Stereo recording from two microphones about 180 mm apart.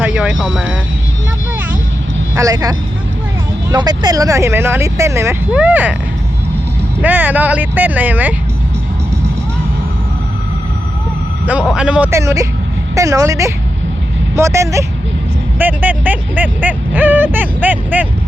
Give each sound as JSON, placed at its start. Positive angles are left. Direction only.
{"t": 0.0, "sound": "speech", "side_deg": -5}
{"t": 2.3, "sound": "speech", "side_deg": -20}
{"t": 7.0, "sound": "speech", "side_deg": -10}
{"t": 11.7, "sound": "speech", "side_deg": -5}